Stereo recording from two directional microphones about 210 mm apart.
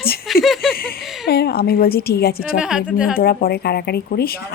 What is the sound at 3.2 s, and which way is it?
A woman's voice, 45° left (ahead or behind).